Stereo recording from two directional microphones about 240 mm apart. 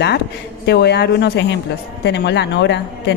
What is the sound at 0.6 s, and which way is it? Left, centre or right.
Speech, left.